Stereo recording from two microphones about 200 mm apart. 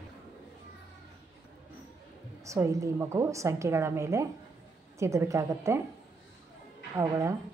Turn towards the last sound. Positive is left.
turn(degrees=-15)  # may be behind; listen again after turning